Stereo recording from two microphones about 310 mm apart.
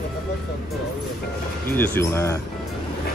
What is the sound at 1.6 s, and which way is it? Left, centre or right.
Speech, centre.